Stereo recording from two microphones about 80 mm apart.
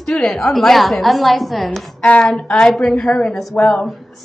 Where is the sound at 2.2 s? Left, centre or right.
Centre.